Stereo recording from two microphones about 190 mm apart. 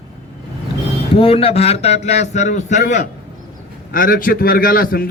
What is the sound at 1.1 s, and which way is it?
A man's voice, 30° left (ahead or behind).